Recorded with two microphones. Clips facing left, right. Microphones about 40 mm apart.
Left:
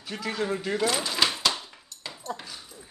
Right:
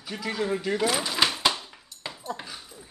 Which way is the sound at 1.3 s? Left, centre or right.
Centre.